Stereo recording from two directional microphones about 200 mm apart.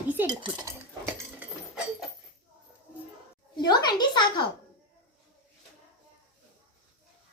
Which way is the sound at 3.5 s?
20° left (ahead or behind).